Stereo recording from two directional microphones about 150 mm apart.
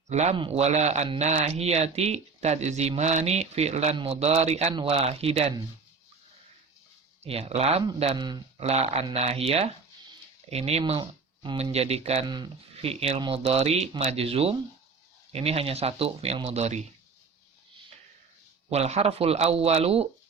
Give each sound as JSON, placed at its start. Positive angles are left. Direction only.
{"t": 0.1, "sound": "speech", "side_deg": -50}
{"t": 0.3, "sound": "speech", "side_deg": -40}
{"t": 7.3, "sound": "speech", "side_deg": -40}
{"t": 12.2, "sound": "speech", "side_deg": -30}
{"t": 12.7, "sound": "speech", "side_deg": -40}
{"t": 18.7, "sound": "speech", "side_deg": -45}